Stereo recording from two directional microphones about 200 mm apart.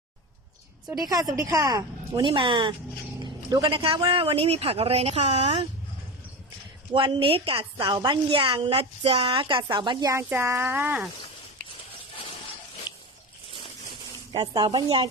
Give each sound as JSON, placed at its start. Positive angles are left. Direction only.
{"t": 0.9, "sound": "a woman's voice", "side_deg": -20}
{"t": 6.9, "sound": "a woman's voice", "side_deg": -25}
{"t": 14.3, "sound": "a woman's voice", "side_deg": -20}